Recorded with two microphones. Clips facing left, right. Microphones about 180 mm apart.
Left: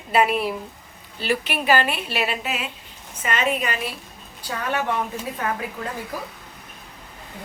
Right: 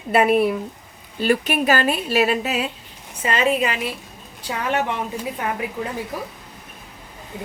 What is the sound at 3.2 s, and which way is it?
Speech, 30° right (ahead or behind).